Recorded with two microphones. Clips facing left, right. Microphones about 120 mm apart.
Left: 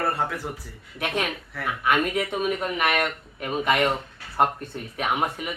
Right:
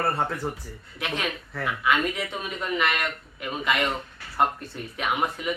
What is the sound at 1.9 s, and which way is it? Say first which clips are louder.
Speech: left 3 dB; 50° left (ahead or behind).